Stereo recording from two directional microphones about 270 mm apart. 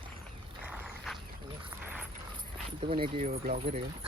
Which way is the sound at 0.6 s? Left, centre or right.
Centre.